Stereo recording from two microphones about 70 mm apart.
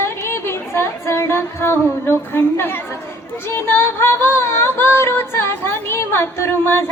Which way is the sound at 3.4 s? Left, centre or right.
Left.